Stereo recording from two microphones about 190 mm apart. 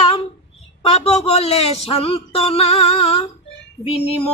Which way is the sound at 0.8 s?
35° left (ahead or behind).